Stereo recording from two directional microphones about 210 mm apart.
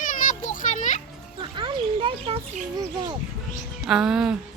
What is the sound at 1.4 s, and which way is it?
Bird, 20° right (ahead or behind).